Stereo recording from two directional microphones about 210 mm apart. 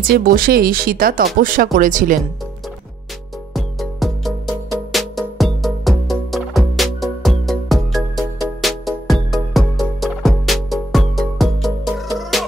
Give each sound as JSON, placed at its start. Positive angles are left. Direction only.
{"t": 0.0, "sound": "speech", "side_deg": -40}
{"t": 3.5, "sound": "music", "side_deg": 0}